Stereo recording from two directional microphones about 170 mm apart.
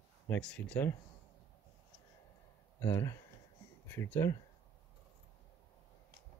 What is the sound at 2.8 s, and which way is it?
Speech, 15° left (ahead or behind).